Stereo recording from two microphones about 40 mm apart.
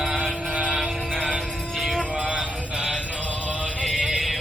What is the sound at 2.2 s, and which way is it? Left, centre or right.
Music, right.